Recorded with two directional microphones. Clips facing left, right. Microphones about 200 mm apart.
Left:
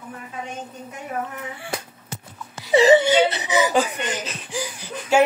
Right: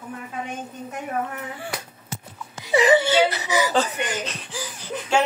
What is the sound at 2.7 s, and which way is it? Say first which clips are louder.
Whimper: left 3 dB; 25° left (ahead or behind).